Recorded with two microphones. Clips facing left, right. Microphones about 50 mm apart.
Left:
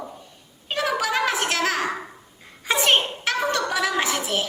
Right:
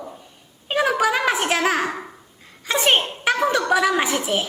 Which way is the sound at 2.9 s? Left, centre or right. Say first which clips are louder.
Right 4 dB; centre.